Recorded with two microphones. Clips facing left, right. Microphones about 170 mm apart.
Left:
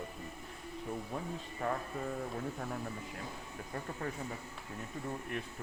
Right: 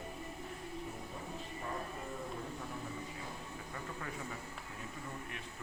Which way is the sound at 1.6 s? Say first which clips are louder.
Left 8 dB; 80° left.